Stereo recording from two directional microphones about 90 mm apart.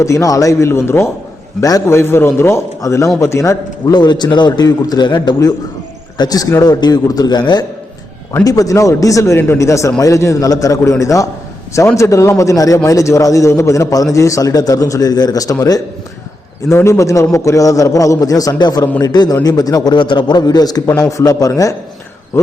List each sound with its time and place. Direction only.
0.0 s a man's voice: 35° left (ahead or behind)
3.9 s a man's voice: 55° left (ahead or behind)
6.1 s a man's voice: 45° left (ahead or behind)
8.4 s a man's voice: 40° left (ahead or behind)